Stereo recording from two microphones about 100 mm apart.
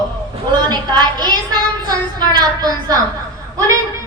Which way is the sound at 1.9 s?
45° right (ahead or behind).